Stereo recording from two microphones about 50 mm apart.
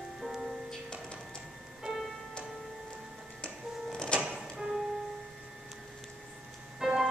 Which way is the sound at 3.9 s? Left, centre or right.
Left.